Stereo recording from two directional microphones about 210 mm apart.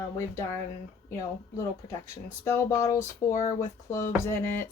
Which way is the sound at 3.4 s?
40° left (ahead or behind).